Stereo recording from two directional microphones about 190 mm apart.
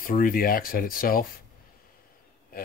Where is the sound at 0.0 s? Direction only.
50° left (ahead or behind).